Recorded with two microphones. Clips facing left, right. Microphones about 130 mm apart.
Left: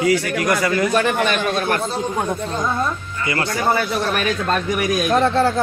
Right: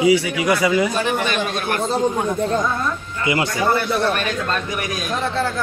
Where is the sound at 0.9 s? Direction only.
60° left (ahead or behind).